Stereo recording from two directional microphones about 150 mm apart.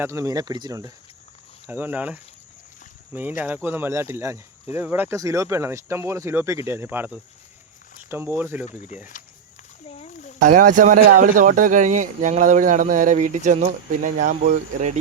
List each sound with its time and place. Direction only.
0.0 s speech: 20° right (ahead or behind)
1.6 s speech: 10° right (ahead or behind)
10.0 s a sound: 55° left (ahead or behind)
10.4 s speech: 65° right (ahead or behind)